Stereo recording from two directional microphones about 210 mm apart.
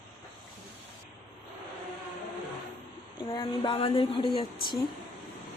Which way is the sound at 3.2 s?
20° left (ahead or behind).